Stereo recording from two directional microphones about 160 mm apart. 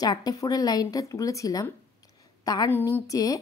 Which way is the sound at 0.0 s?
25° left (ahead or behind).